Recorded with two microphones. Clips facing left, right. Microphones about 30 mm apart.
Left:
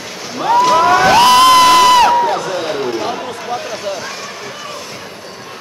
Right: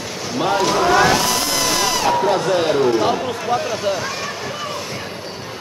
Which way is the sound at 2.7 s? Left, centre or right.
Centre.